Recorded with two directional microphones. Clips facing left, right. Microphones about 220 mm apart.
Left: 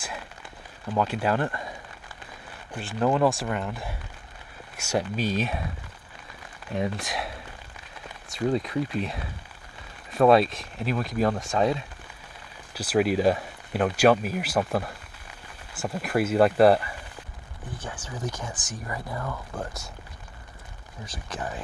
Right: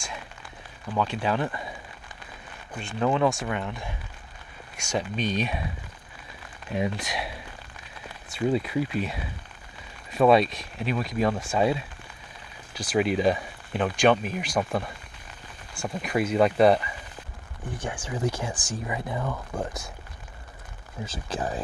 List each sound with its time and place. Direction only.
0.9 s speech: 10° left (ahead or behind)
1.4 s speech: 5° right (ahead or behind)
2.7 s speech: 5° left (ahead or behind)
6.7 s speech: centre (ahead or behind)
8.4 s speech: 5° right (ahead or behind)
18.0 s speech: 25° right (ahead or behind)
19.1 s speech: 10° right (ahead or behind)
21.0 s speech: 25° right (ahead or behind)